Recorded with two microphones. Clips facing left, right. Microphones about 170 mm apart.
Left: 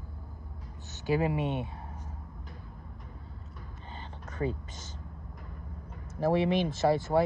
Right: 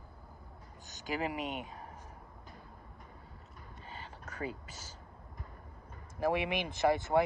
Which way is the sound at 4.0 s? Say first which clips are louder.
Left 5 dB; 10° right (ahead or behind).